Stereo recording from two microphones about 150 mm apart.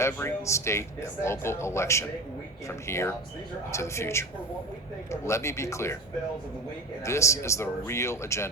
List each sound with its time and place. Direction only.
0.0 s speech: 15° left (ahead or behind)
7.0 s speech: 20° left (ahead or behind)